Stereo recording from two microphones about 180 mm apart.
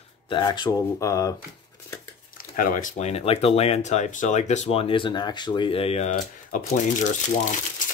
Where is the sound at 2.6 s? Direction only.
50° left (ahead or behind).